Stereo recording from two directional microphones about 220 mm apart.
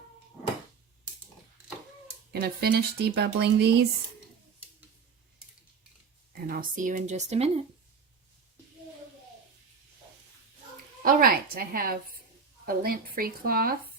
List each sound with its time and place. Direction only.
2.3 s a woman's voice: 45° right (ahead or behind)
6.3 s speech: 40° right (ahead or behind)
11.0 s a woman's voice: 40° right (ahead or behind)